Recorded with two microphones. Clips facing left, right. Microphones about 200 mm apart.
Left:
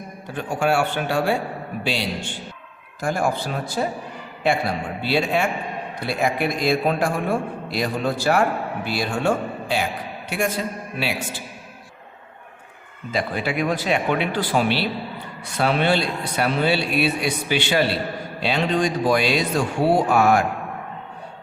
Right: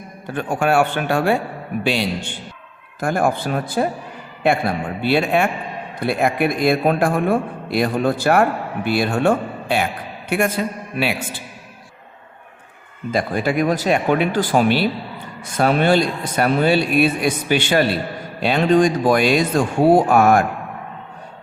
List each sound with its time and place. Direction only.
0.3 s a man's voice: 55° right (ahead or behind)
3.0 s a man's voice: 55° right (ahead or behind)
13.1 s speech: 45° right (ahead or behind)